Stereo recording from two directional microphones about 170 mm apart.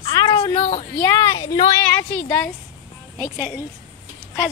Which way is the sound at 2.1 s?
10° left (ahead or behind).